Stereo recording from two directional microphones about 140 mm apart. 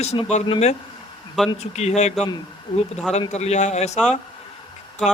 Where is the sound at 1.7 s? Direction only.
50° left (ahead or behind).